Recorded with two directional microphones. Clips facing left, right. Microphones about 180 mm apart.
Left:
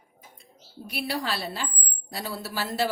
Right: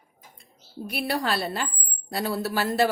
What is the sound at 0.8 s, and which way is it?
A woman's voice, 55° right (ahead or behind).